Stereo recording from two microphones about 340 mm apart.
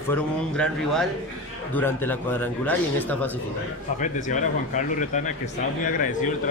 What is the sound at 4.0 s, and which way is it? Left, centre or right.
Speech, left.